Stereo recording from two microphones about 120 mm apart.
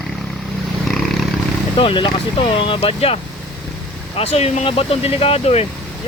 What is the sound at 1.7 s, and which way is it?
Speech, 45° left (ahead or behind).